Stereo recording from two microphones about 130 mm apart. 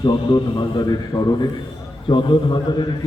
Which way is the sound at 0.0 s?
35° left (ahead or behind).